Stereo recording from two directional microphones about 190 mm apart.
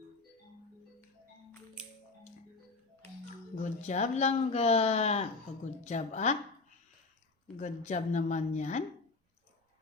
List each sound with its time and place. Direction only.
3.6 s speech: 40° left (ahead or behind)
7.6 s speech: 40° left (ahead or behind)